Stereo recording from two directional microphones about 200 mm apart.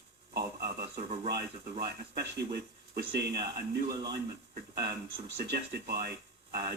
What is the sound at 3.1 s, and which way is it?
Speech, 55° right (ahead or behind).